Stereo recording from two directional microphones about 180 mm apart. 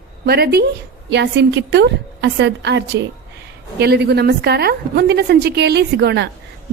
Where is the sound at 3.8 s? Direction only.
65° right (ahead or behind).